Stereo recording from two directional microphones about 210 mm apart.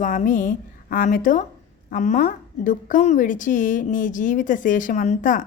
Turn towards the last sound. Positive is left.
turn(degrees=40)  # may be behind; listen again after turning